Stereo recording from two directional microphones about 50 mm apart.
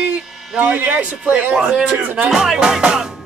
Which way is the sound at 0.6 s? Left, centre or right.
Right.